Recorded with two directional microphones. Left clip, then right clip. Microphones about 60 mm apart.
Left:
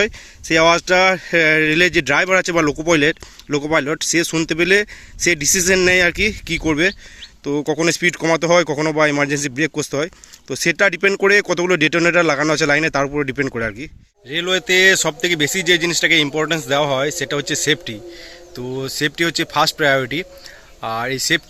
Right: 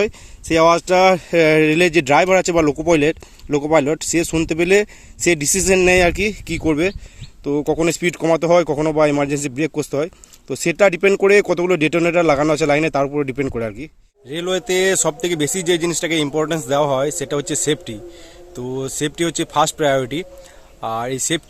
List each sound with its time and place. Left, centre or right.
0.0 s a man's voice: right; by 13.9 s centre
14.3 s speech: right
18.5 s speech: right